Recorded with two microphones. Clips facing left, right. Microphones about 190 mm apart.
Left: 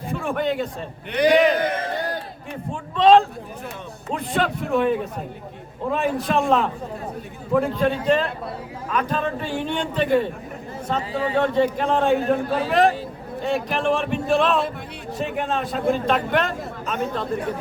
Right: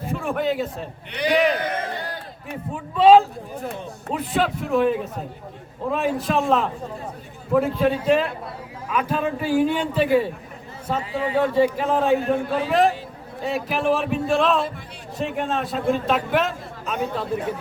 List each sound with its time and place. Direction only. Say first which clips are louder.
0.1 s a man's voice: even; centre (ahead or behind)
2.7 s a man's voice: right 1 dB; 5° right (ahead or behind)